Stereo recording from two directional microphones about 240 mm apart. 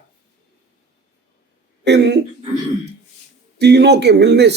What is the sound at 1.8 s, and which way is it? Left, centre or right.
Speech, right.